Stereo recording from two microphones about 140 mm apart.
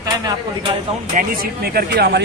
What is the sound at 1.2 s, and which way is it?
Speech, 90° right.